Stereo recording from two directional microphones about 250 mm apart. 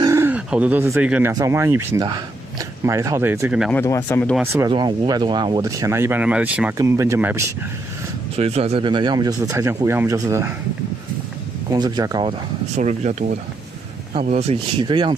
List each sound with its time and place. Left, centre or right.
0.0 s speech: centre
3.7 s speech: centre
4.4 s speech: centre
8.4 s speech: right
11.7 s speech: centre